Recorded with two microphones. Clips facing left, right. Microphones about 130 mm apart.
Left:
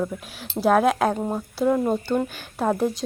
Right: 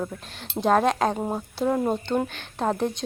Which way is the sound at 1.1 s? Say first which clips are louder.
Left 2 dB; 10° right (ahead or behind).